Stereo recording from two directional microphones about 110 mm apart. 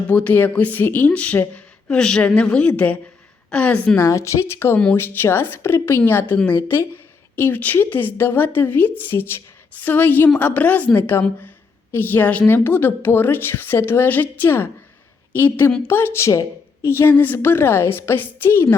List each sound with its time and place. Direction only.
0.1 s a woman's voice: 15° left (ahead or behind)
4.0 s a woman's voice: 25° left (ahead or behind)